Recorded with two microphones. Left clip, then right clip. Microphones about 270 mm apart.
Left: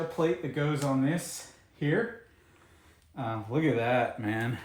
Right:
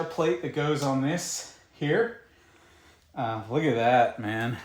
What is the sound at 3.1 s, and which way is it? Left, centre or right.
Speech, centre.